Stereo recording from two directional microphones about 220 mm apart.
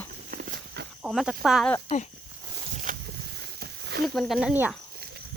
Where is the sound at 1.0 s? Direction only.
Centre (ahead or behind).